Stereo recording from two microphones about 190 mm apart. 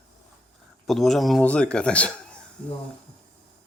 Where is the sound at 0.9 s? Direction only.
Centre (ahead or behind).